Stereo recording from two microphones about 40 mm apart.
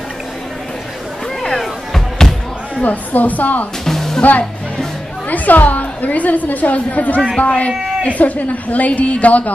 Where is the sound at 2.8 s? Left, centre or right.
Left.